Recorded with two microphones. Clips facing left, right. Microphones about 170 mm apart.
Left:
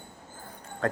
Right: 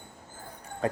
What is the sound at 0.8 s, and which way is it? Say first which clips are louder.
Speech: even; 10° right (ahead or behind).